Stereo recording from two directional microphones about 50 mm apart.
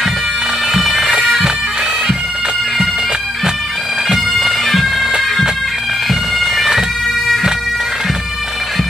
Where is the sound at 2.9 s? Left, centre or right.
Centre.